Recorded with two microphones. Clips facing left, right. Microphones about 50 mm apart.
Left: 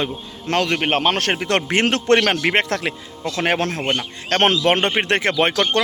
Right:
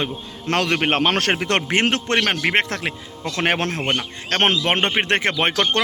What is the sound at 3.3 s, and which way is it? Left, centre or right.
Speech, right.